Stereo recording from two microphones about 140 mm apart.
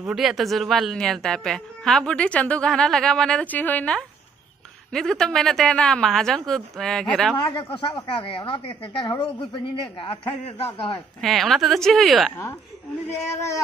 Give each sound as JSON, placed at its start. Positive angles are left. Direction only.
{"t": 0.0, "sound": "speech", "side_deg": -5}
{"t": 7.4, "sound": "a woman's voice", "side_deg": 35}
{"t": 11.1, "sound": "speech", "side_deg": 0}
{"t": 13.1, "sound": "speech", "side_deg": 20}